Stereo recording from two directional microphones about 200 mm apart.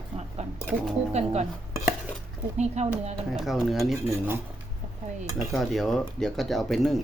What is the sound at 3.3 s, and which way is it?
Speech, centre (ahead or behind).